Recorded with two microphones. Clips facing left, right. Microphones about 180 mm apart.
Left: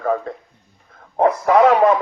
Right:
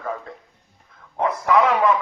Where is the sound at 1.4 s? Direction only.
40° left (ahead or behind).